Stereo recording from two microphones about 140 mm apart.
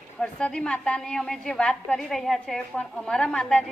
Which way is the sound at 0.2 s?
5° left (ahead or behind).